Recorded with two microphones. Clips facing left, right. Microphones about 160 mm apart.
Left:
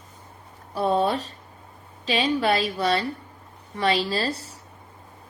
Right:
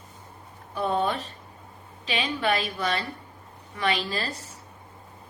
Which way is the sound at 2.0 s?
40° left (ahead or behind).